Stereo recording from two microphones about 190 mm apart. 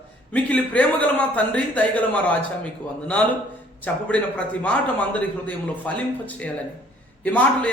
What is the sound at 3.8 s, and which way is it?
A man's voice, 5° left (ahead or behind).